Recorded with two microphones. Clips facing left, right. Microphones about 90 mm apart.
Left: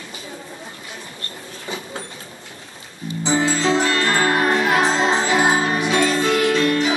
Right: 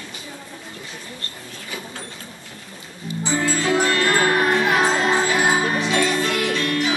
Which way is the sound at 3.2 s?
20° left (ahead or behind).